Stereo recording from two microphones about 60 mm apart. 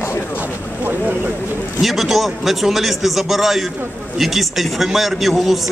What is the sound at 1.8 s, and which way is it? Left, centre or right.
A man's voice, centre.